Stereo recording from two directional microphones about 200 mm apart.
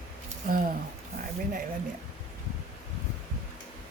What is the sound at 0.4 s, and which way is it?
Speech, 45° right (ahead or behind).